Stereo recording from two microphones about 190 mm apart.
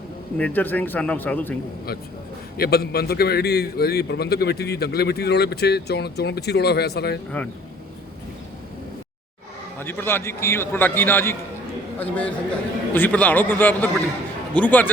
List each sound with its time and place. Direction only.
0.3 s a man's voice: 10° left (ahead or behind)
2.6 s a man's voice: 55° left (ahead or behind)
7.3 s a man's voice: 5° left (ahead or behind)
9.7 s a man's voice: 10° left (ahead or behind)